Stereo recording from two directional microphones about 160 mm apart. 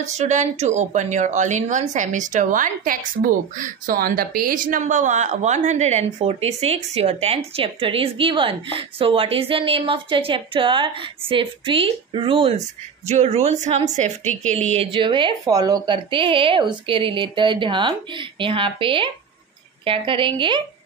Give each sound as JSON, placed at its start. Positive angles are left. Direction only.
{"t": 0.0, "sound": "speech", "side_deg": -45}
{"t": 14.3, "sound": "speech", "side_deg": 5}
{"t": 14.7, "sound": "a woman's voice", "side_deg": -35}